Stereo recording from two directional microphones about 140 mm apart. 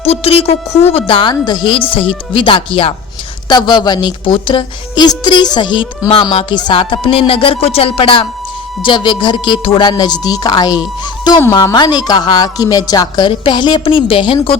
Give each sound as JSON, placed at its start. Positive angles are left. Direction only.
{"t": 0.0, "sound": "a woman's voice", "side_deg": 45}